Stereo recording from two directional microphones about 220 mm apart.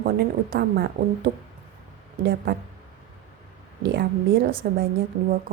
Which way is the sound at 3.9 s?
45° right (ahead or behind).